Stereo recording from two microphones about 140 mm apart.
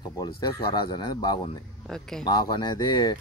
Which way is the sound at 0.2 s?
30° left (ahead or behind).